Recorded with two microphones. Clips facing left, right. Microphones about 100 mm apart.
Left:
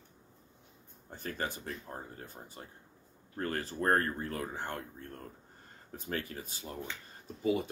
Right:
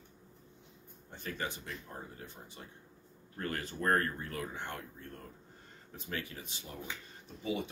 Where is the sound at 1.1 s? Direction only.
40° left (ahead or behind).